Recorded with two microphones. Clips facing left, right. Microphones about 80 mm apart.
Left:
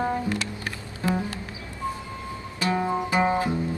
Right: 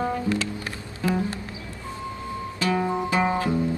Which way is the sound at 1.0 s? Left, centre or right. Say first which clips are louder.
Right 1 dB; left.